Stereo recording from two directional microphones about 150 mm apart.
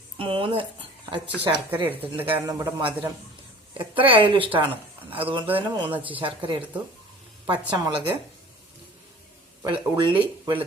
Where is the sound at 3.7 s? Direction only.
35° right (ahead or behind).